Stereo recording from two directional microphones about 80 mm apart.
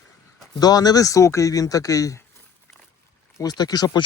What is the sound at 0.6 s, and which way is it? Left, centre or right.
A man's voice, left.